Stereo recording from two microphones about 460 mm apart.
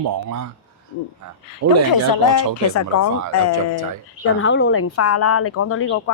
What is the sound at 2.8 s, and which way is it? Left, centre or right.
Speech, left.